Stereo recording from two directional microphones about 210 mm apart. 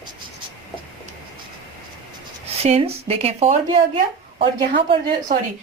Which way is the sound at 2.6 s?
30° right (ahead or behind).